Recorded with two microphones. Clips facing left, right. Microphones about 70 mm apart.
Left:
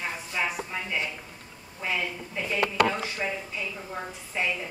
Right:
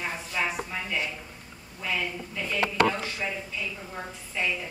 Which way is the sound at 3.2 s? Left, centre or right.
Centre.